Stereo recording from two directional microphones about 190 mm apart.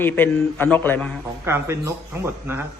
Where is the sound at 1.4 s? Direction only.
15° right (ahead or behind).